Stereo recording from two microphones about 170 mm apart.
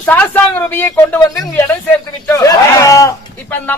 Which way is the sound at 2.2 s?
15° left (ahead or behind).